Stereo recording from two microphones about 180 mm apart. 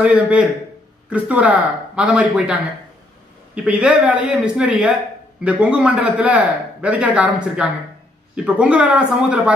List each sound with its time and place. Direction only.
0.0 s a man's voice: 5° right (ahead or behind)
3.5 s a man's voice: 5° right (ahead or behind)